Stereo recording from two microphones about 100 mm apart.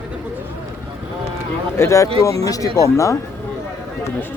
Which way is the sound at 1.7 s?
30° left (ahead or behind).